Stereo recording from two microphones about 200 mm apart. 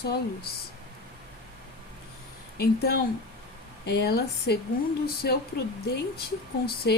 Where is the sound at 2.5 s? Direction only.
50° left (ahead or behind).